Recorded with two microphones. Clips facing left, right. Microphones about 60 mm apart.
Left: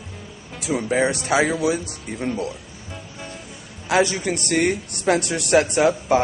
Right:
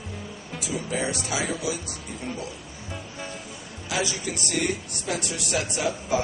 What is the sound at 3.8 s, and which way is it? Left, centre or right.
A man's voice, left.